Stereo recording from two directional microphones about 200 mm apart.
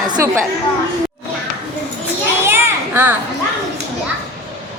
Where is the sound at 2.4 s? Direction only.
10° right (ahead or behind).